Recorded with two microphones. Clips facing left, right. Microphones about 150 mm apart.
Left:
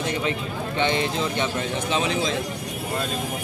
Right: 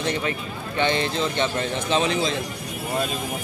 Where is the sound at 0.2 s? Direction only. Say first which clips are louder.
Left 2 dB; 20° left (ahead or behind).